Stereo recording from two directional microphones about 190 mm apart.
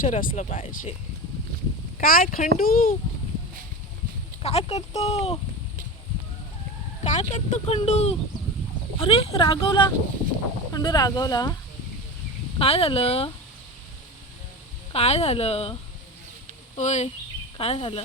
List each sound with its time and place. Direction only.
0.0 s speech: 45° left (ahead or behind)
2.0 s speech: 45° left (ahead or behind)
4.4 s speech: 35° left (ahead or behind)
7.0 s speech: 35° left (ahead or behind); by 11.5 s 20° left (ahead or behind)
12.5 s speech: 30° left (ahead or behind)
14.9 s speech: 35° left (ahead or behind)